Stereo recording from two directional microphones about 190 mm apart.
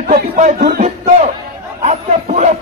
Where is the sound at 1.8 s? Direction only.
35° right (ahead or behind).